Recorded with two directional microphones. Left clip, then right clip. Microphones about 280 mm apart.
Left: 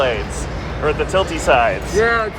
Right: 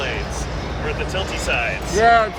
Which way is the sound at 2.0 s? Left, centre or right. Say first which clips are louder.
Right 4 dB; right.